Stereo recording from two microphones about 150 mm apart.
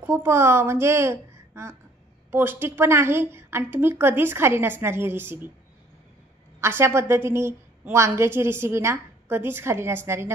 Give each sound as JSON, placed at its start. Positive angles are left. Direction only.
{"t": 0.0, "sound": "a woman's voice", "side_deg": -15}
{"t": 6.6, "sound": "a woman's voice", "side_deg": -15}